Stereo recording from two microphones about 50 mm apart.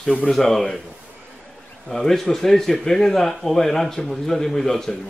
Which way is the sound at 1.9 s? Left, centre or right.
Centre.